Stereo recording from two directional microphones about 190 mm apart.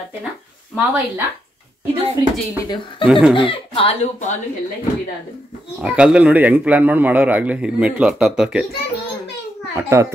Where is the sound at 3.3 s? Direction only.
25° left (ahead or behind).